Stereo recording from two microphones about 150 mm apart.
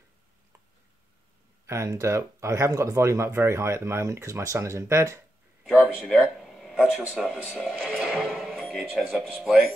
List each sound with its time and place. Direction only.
1.7 s speech: 20° right (ahead or behind)
5.6 s a sound: 10° right (ahead or behind)
9.3 s speech: 5° right (ahead or behind)